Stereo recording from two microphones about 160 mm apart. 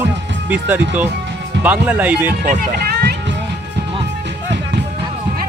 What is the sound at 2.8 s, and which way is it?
Music, 75° right (ahead or behind).